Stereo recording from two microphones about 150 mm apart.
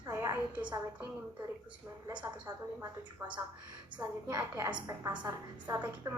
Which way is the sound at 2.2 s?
20° right (ahead or behind).